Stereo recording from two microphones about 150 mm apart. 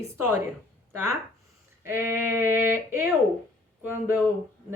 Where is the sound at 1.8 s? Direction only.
15° right (ahead or behind).